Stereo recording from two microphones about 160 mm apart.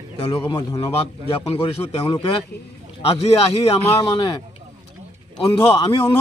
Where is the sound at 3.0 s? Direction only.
40° left (ahead or behind).